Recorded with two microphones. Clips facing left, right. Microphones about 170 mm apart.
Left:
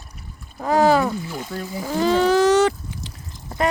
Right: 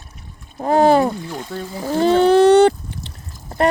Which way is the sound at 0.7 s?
55° right (ahead or behind).